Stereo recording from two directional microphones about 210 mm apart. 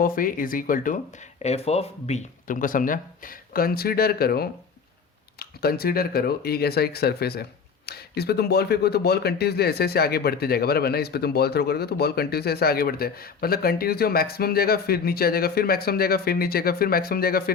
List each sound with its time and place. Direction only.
0.0 s speech: 40° left (ahead or behind)
1.4 s speech: 30° left (ahead or behind); by 17.5 s 45° left (ahead or behind)